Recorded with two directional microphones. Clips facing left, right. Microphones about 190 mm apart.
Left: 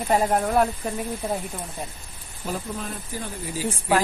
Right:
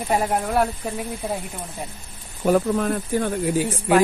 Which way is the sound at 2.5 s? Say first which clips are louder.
Right 12 dB; 65° right (ahead or behind).